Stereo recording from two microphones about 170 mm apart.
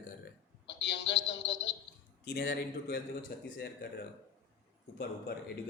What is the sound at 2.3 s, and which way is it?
A man's voice, 65° left (ahead or behind).